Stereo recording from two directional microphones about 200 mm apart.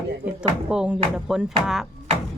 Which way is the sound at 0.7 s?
5° right (ahead or behind).